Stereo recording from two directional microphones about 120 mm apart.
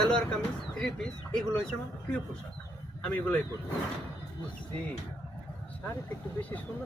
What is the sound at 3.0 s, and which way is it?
Speech, 10° left (ahead or behind).